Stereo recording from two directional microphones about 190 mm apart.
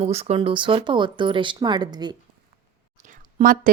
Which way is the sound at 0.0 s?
35° right (ahead or behind).